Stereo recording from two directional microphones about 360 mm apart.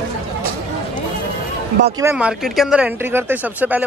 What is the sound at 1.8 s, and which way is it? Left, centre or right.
Speech, centre.